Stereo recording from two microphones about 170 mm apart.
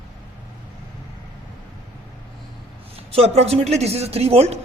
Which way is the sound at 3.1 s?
35° right (ahead or behind).